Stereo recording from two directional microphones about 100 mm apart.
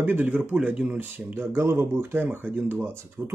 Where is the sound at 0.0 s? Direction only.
20° right (ahead or behind).